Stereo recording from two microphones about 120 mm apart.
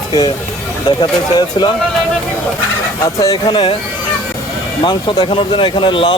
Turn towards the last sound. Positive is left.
turn(degrees=45)  # may be behind; listen again after turning